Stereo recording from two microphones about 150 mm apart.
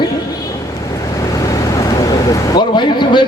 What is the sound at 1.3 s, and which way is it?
Vehicle, 25° left (ahead or behind).